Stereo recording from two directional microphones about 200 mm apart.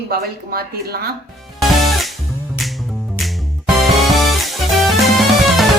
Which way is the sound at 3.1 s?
Centre (ahead or behind).